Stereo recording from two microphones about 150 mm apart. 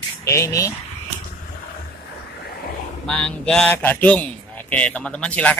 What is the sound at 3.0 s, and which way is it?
A man's voice, 5° left (ahead or behind).